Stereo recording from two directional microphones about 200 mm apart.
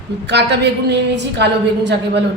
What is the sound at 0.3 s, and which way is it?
A woman's voice, 60° right (ahead or behind).